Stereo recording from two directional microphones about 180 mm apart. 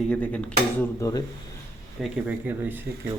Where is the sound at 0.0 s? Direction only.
5° left (ahead or behind).